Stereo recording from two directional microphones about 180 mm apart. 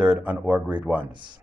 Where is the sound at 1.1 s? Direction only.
25° right (ahead or behind).